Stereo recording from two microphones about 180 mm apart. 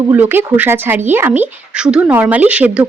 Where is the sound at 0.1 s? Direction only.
10° right (ahead or behind).